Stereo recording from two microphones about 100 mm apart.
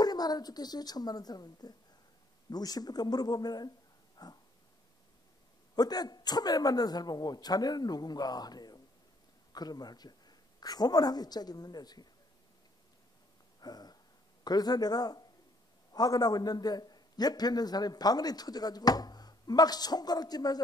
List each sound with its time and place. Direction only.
0.0 s a man's voice: 40° left (ahead or behind)
4.2 s dog: 40° left (ahead or behind)
5.8 s a man's voice: 40° left (ahead or behind)
13.6 s a sound: 40° left (ahead or behind)
14.4 s a man's voice: 40° left (ahead or behind)